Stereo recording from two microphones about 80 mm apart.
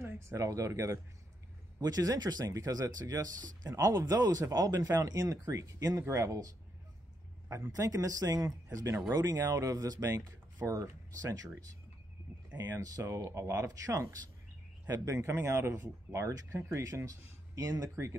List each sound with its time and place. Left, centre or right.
0.0 s speech: right
1.8 s speech: right
9.1 s speech: right